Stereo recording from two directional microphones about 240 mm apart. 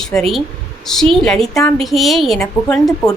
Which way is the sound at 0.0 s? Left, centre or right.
Centre.